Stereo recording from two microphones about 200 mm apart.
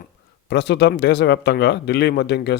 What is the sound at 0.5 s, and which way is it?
Speech, 60° left (ahead or behind).